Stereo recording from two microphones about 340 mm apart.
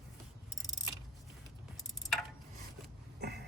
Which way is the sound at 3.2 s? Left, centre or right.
Right.